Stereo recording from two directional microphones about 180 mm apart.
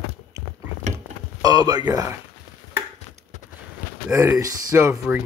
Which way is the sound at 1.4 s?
20° right (ahead or behind).